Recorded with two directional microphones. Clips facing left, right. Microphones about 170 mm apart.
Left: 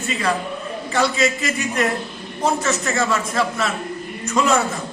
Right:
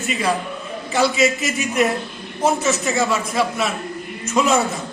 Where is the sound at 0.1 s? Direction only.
15° right (ahead or behind).